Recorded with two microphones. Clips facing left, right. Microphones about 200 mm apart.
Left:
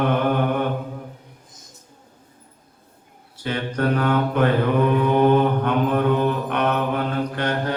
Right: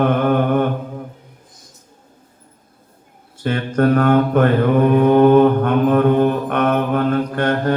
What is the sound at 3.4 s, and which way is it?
Mantra, 50° right (ahead or behind).